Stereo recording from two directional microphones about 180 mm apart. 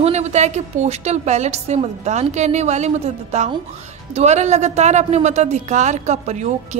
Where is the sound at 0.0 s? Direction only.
40° right (ahead or behind).